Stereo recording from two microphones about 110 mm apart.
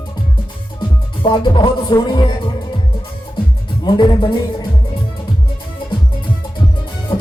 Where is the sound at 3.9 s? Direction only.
40° left (ahead or behind).